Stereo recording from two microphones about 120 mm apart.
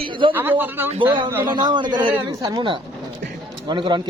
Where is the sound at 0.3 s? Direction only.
15° right (ahead or behind).